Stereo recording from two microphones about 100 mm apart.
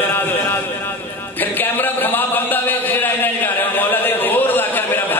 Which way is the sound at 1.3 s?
20° left (ahead or behind).